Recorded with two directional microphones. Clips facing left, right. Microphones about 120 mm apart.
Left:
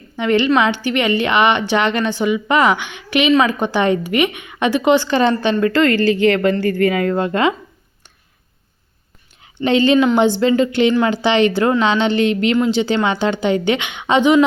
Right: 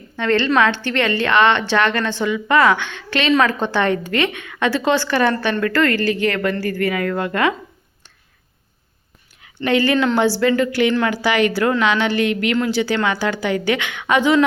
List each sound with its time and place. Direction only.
0.2 s a woman's voice: 15° left (ahead or behind)
9.4 s a woman's voice: 25° left (ahead or behind)